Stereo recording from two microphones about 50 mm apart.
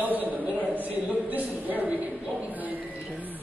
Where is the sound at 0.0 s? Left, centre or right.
Right.